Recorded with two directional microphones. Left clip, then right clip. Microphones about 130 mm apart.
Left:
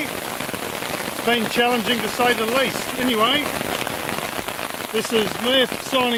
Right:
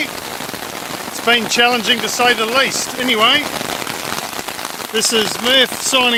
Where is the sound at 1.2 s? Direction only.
10° right (ahead or behind).